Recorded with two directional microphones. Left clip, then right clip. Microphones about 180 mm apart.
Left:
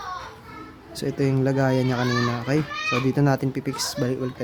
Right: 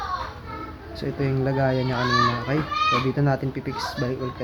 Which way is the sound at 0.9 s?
65° left (ahead or behind).